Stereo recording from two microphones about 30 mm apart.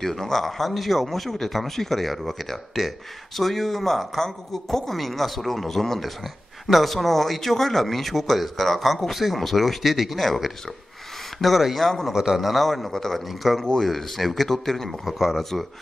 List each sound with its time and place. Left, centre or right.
0.0 s speech: centre
9.8 s speech: centre
11.6 s speech: centre
12.1 s a man's voice: centre
12.4 s speech: centre
13.3 s speech: centre
14.9 s speech: centre